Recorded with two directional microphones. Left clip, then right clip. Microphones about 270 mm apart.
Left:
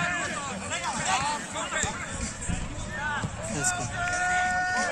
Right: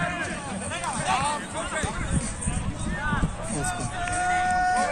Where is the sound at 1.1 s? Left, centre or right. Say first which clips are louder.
Right 3 dB; right.